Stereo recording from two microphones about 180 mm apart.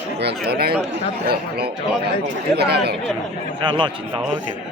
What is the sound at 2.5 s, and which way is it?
Speech, 65° right (ahead or behind).